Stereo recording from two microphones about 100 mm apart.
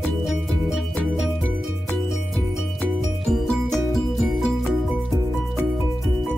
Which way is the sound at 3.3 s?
Centre (ahead or behind).